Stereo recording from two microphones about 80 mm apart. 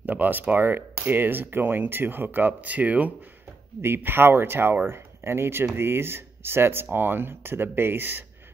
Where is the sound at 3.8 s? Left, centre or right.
Right.